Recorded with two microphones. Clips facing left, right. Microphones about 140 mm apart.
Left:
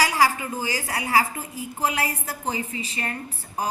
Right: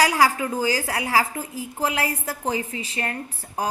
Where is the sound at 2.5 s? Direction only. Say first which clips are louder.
Right 2 dB; 60° right (ahead or behind).